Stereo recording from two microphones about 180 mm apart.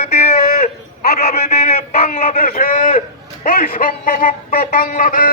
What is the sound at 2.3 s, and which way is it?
A man's voice, 55° left (ahead or behind).